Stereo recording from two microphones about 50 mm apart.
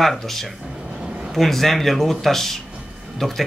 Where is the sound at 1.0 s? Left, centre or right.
Centre.